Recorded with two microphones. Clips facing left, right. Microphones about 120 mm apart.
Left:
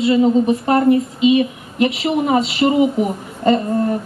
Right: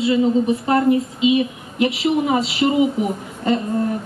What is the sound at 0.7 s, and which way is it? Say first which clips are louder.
A woman's voice: left 2 dB; 50° left (ahead or behind).